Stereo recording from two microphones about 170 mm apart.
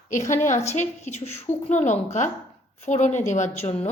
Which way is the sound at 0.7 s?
40° left (ahead or behind).